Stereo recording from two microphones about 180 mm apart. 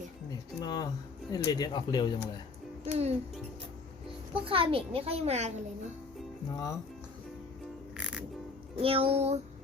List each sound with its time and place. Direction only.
0.6 s speech: 20° left (ahead or behind)
2.8 s a child's voice: 35° right (ahead or behind)
4.4 s a child's voice: 30° right (ahead or behind)
6.5 s speech: 20° left (ahead or behind)
7.9 s music: 5° right (ahead or behind)
8.8 s a child's voice: 30° right (ahead or behind)